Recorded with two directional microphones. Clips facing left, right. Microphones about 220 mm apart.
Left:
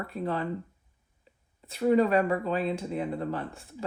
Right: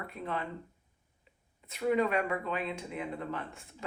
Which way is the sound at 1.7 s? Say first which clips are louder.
Left 6 dB; 35° left (ahead or behind).